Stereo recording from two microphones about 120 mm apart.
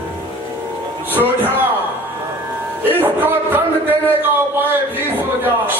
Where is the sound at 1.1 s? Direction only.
15° right (ahead or behind).